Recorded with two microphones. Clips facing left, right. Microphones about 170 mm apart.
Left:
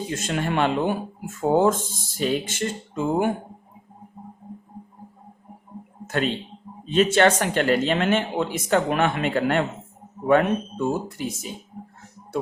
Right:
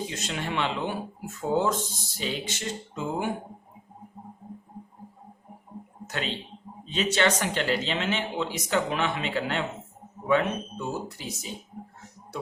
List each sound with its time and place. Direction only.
0.1 s speech: 50° left (ahead or behind)
6.1 s speech: 50° left (ahead or behind)